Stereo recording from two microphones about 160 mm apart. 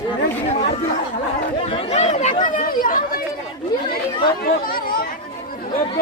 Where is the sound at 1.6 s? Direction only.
35° left (ahead or behind); by 3.0 s 60° left (ahead or behind).